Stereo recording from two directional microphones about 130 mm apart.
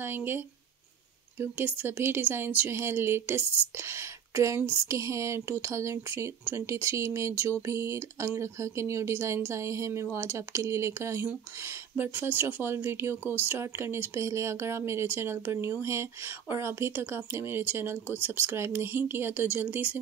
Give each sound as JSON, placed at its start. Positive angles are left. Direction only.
{"t": 0.0, "sound": "speech", "side_deg": -15}
{"t": 1.4, "sound": "speech", "side_deg": -15}